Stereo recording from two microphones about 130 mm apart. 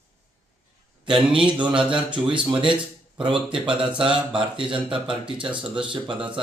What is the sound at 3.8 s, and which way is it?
Speech, 40° right (ahead or behind).